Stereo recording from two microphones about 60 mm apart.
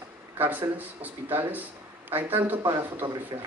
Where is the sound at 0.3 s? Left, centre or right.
Right.